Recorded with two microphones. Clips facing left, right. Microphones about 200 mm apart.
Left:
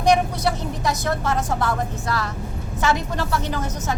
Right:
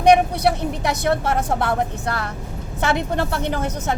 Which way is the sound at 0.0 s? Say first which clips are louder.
Right 4 dB; 60° right (ahead or behind).